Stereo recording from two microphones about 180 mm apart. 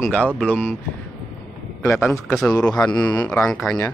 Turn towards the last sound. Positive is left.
turn(degrees=0)  # may be behind; listen again after turning